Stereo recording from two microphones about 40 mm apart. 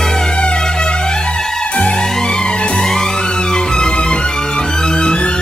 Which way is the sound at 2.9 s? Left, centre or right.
Centre.